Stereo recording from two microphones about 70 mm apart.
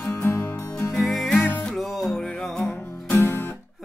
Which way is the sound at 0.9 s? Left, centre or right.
Centre.